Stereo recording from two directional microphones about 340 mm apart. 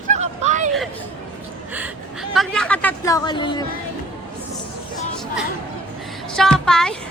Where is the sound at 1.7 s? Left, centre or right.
Centre.